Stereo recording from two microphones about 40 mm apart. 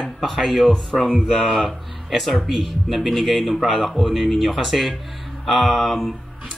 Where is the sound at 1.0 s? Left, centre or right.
Centre.